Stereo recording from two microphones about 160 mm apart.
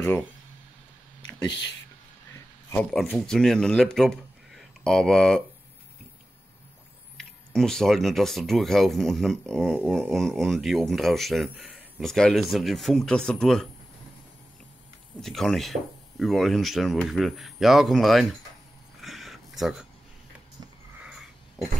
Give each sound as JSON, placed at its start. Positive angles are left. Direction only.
{"t": 0.0, "sound": "speech", "side_deg": 15}
{"t": 1.5, "sound": "speech", "side_deg": 90}
{"t": 2.7, "sound": "speech", "side_deg": 5}
{"t": 7.2, "sound": "speech", "side_deg": 5}
{"t": 15.2, "sound": "speech", "side_deg": 0}
{"t": 18.9, "sound": "a sound", "side_deg": 0}
{"t": 21.0, "sound": "sniff", "side_deg": -5}